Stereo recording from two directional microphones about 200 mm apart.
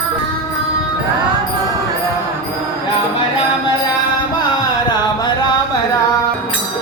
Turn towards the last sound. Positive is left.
turn(degrees=20)  # may be behind; listen again after turning